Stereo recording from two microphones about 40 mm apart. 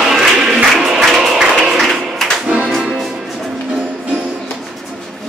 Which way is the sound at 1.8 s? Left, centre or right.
Centre.